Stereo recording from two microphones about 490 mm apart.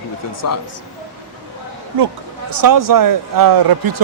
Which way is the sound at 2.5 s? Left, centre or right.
Right.